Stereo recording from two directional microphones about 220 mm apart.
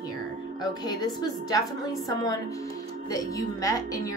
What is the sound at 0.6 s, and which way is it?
A woman's voice, 20° left (ahead or behind).